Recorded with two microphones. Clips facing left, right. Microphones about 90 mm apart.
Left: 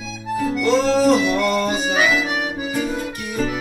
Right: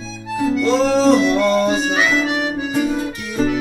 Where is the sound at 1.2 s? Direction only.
10° left (ahead or behind).